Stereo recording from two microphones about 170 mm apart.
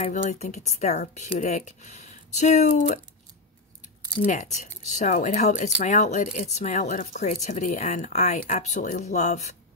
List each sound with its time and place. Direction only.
0.0 s speech: 45° left (ahead or behind)
4.2 s speech: 45° left (ahead or behind)